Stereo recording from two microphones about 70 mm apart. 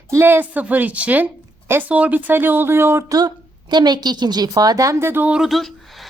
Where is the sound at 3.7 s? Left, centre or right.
Right.